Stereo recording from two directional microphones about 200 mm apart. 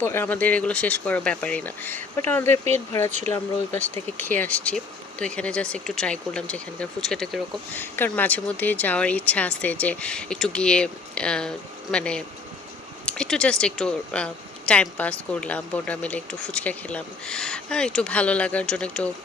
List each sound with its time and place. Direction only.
0.0 s speech: 10° left (ahead or behind)
3.1 s speech: 35° right (ahead or behind)
3.3 s speech: 10° left (ahead or behind)